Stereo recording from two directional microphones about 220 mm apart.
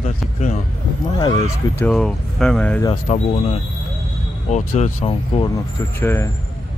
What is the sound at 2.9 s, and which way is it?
Speech, 30° left (ahead or behind).